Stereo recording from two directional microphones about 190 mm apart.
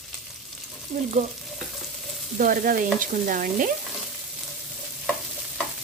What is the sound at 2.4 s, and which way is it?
A woman's voice, 45° right (ahead or behind).